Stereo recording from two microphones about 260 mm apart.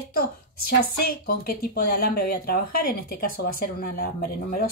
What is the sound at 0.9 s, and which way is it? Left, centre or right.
Speech, left.